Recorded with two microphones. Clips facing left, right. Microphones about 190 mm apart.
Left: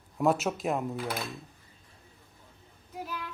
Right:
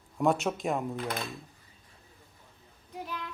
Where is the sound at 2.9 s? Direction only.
5° left (ahead or behind).